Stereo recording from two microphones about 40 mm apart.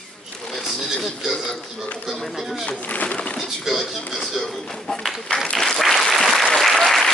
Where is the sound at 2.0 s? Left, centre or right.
Centre.